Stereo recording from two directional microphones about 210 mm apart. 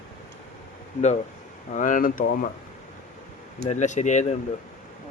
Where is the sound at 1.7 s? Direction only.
40° left (ahead or behind).